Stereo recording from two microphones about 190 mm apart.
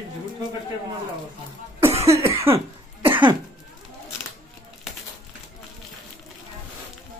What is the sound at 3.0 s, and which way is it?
Cough, 25° right (ahead or behind).